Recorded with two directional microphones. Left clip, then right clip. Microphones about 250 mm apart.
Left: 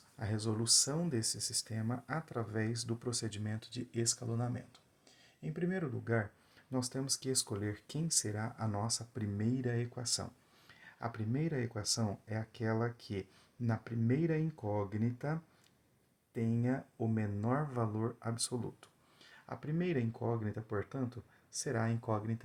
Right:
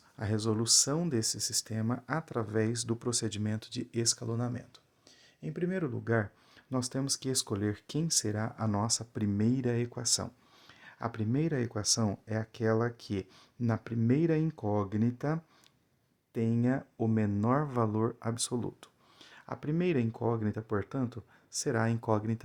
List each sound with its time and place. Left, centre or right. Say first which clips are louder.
0.2 s speech: right 6 dB; right